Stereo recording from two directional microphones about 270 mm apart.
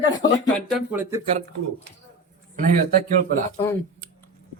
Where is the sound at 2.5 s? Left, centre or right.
Right.